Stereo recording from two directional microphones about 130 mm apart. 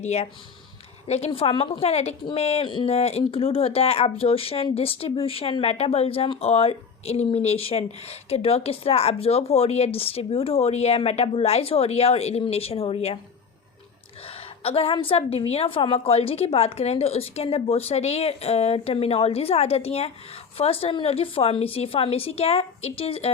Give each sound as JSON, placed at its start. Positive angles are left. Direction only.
{"t": 0.0, "sound": "speech", "side_deg": 55}
{"t": 14.3, "sound": "a sound", "side_deg": 50}
{"t": 14.9, "sound": "speech", "side_deg": 45}